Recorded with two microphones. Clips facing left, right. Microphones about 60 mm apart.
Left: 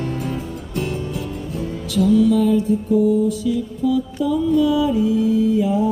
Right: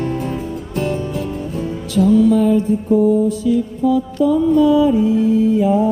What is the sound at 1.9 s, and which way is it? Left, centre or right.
Music, right.